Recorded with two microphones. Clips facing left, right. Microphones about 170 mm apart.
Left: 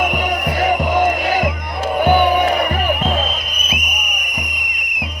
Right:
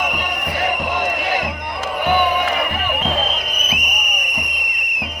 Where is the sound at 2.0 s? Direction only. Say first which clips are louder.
Left 4 dB; 40° left (ahead or behind).